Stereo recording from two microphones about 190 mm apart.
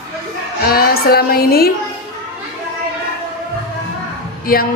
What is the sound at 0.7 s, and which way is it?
A woman's voice, 55° left (ahead or behind).